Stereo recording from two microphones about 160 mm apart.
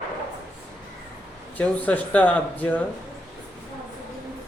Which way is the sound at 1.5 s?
10° left (ahead or behind).